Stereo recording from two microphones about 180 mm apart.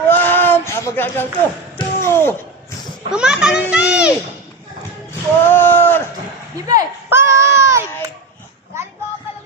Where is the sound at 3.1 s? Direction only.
5° right (ahead or behind).